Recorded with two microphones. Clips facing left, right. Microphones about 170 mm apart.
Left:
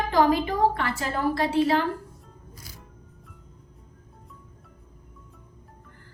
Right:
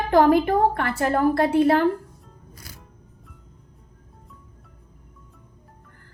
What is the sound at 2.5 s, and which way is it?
Music, 60° right (ahead or behind).